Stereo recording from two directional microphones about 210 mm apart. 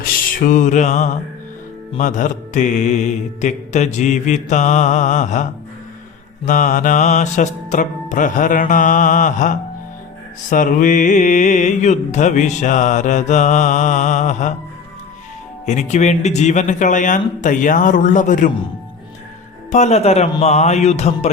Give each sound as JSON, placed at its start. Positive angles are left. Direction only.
{"t": 0.4, "sound": "mantra", "side_deg": 35}
{"t": 15.6, "sound": "mantra", "side_deg": 35}
{"t": 19.7, "sound": "mantra", "side_deg": 30}